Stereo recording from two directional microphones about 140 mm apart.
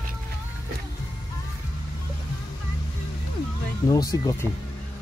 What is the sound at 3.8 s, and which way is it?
Speech, 25° left (ahead or behind).